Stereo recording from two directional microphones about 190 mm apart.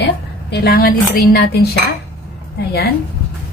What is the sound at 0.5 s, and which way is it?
A woman's voice, 55° left (ahead or behind).